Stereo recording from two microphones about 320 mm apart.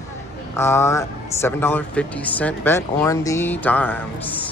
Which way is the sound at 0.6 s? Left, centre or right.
Centre.